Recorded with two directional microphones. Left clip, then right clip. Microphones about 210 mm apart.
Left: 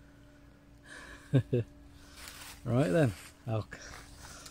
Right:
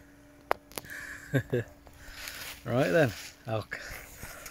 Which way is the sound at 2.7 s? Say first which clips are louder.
Right 4 dB; 5° left (ahead or behind).